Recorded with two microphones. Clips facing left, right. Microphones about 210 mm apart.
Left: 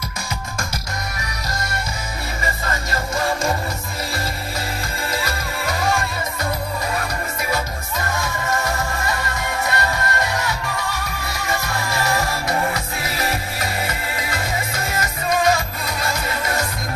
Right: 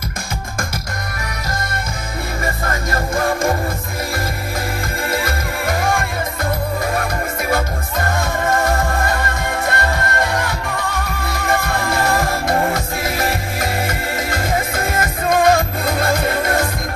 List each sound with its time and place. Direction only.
2.4 s music: 55° right (ahead or behind)
5.1 s music: 50° right (ahead or behind)